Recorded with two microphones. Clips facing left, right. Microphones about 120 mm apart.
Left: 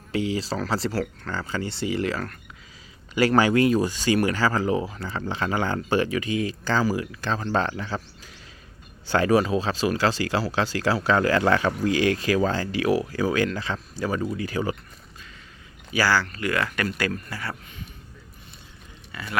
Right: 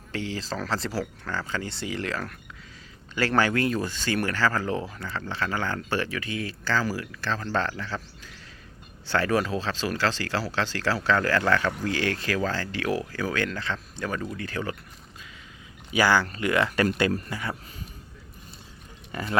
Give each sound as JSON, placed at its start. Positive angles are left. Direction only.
{"t": 0.1, "sound": "speech", "side_deg": 5}
{"t": 9.0, "sound": "speech", "side_deg": 15}
{"t": 15.9, "sound": "speech", "side_deg": -20}
{"t": 17.2, "sound": "speech", "side_deg": -15}